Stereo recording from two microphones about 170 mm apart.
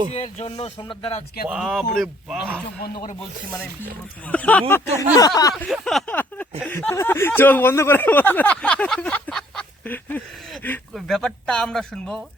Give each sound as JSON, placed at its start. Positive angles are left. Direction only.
{"t": 0.1, "sound": "speech", "side_deg": 40}
{"t": 1.5, "sound": "speech", "side_deg": -5}
{"t": 4.3, "sound": "speech", "side_deg": 10}
{"t": 4.9, "sound": "speech", "side_deg": 20}
{"t": 5.5, "sound": "speech", "side_deg": 0}